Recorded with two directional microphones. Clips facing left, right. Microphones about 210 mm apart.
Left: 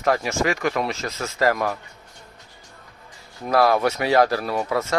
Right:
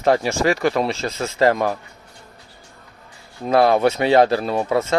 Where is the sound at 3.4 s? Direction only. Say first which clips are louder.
Right 3 dB; 25° right (ahead or behind).